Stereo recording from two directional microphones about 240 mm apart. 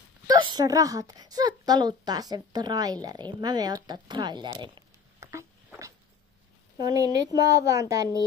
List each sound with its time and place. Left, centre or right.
0.3 s speech: centre
6.8 s speech: centre